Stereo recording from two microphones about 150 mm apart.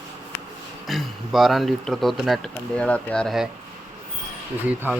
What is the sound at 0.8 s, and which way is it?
Speech, centre (ahead or behind).